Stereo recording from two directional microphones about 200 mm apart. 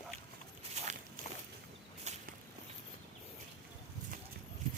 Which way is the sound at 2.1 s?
35° right (ahead or behind).